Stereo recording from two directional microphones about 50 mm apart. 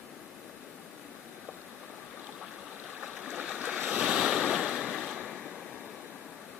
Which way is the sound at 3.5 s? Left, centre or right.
Right.